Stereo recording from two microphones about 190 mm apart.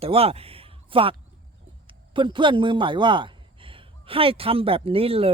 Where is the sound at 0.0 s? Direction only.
30° right (ahead or behind).